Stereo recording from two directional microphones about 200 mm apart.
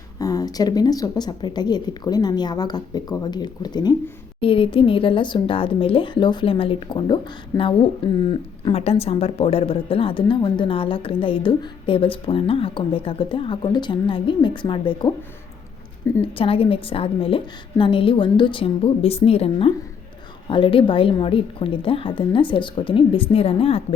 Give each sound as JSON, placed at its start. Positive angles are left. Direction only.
{"t": 0.2, "sound": "a woman's voice", "side_deg": 20}
{"t": 16.2, "sound": "a woman's voice", "side_deg": 25}